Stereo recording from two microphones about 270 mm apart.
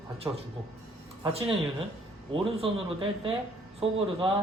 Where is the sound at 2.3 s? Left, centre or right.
Centre.